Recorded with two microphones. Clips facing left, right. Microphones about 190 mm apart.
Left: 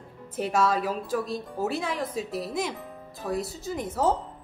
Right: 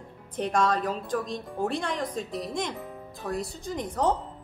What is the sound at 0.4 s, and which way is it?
Speech, 5° left (ahead or behind).